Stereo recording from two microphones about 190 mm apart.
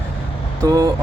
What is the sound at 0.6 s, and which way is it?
Vehicle, 20° right (ahead or behind).